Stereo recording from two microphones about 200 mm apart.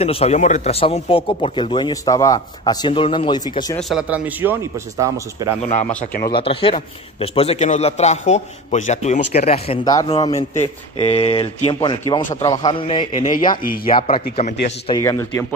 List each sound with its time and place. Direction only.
0.0 s speech: 30° left (ahead or behind)
3.9 s speech: 5° right (ahead or behind)
6.2 s a man's voice: 25° left (ahead or behind)
13.4 s speech: 45° left (ahead or behind)
13.9 s speech: 25° left (ahead or behind)
14.9 s speech: 15° left (ahead or behind)